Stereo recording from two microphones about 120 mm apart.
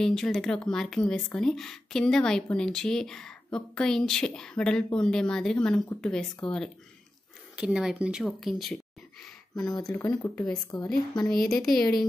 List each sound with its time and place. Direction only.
0.0 s speech: 5° left (ahead or behind)
7.5 s speech: 5° right (ahead or behind)
9.6 s speech: 35° left (ahead or behind)
9.9 s speech: 20° left (ahead or behind)
10.7 s speech: 40° left (ahead or behind)
11.2 s speech: 5° left (ahead or behind)